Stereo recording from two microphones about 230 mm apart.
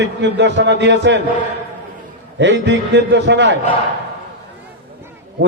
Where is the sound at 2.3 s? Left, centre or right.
Right.